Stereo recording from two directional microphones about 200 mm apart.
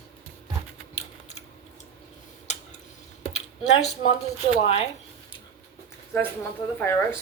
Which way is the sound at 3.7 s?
35° left (ahead or behind).